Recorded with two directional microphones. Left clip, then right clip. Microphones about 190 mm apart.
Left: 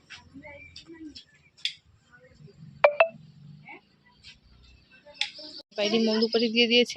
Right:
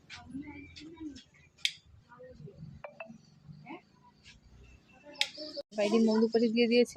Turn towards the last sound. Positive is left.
turn(degrees=0)  # may be behind; listen again after turning